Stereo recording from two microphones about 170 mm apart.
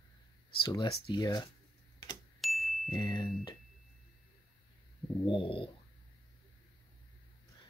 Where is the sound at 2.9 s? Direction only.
25° left (ahead or behind).